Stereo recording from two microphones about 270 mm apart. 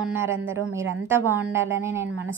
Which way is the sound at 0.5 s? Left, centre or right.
Right.